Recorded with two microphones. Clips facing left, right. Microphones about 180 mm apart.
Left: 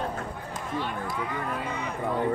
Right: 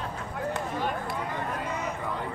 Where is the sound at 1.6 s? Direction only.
60° left (ahead or behind).